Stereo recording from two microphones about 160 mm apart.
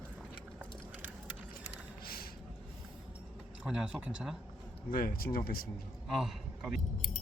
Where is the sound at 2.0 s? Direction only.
70° left (ahead or behind).